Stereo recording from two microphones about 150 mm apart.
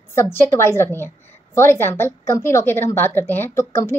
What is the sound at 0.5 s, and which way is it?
A woman's voice, 15° left (ahead or behind).